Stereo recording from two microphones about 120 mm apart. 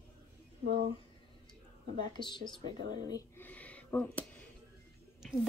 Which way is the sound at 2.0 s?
40° left (ahead or behind).